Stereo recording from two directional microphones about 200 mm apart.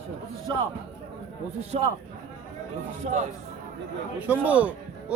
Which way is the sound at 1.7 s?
30° right (ahead or behind).